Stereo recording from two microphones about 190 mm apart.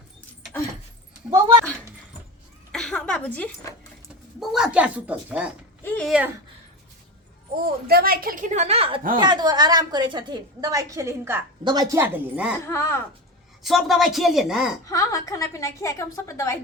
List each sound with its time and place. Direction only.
2.7 s a sound: 5° left (ahead or behind)
4.4 s a woman's voice: centre (ahead or behind)
5.8 s speech: 10° left (ahead or behind)
6.1 s a woman's voice: 5° right (ahead or behind)
7.5 s a woman's voice: 50° right (ahead or behind); by 12.5 s 10° right (ahead or behind)
12.5 s a woman's voice: 15° left (ahead or behind)
13.6 s a woman's voice: centre (ahead or behind)
14.8 s a woman's voice: 15° left (ahead or behind)